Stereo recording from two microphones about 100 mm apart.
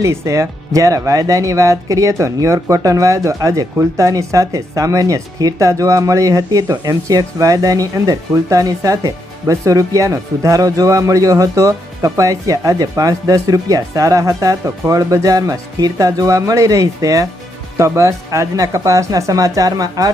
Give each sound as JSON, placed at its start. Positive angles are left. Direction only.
{"t": 0.0, "sound": "speech", "side_deg": -30}